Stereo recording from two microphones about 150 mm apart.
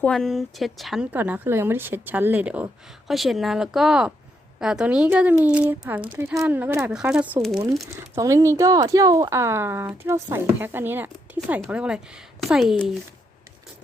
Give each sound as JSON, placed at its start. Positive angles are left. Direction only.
{"t": 0.0, "sound": "speech", "side_deg": 5}
{"t": 1.1, "sound": "a woman's voice", "side_deg": -10}
{"t": 8.1, "sound": "a woman's voice", "side_deg": -20}